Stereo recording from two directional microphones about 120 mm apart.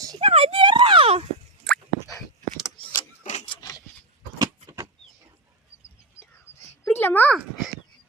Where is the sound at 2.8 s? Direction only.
45° left (ahead or behind).